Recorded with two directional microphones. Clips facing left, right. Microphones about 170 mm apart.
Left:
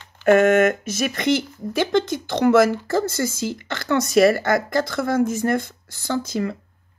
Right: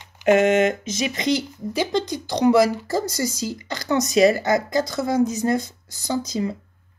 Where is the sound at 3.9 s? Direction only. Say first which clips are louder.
Even; 20° right (ahead or behind).